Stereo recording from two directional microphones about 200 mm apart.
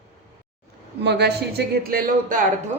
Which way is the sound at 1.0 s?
55° right (ahead or behind).